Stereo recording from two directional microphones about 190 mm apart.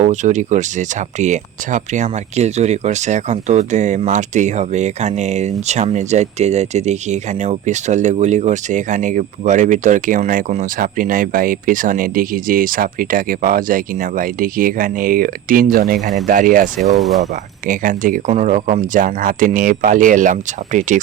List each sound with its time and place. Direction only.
0.0 s speech: 40° right (ahead or behind)